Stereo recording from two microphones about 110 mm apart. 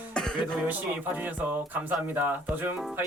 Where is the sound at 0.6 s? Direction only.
15° right (ahead or behind).